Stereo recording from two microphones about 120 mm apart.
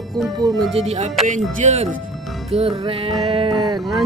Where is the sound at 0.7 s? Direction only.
65° right (ahead or behind).